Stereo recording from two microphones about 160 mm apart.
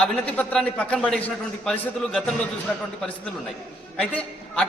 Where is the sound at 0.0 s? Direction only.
5° left (ahead or behind).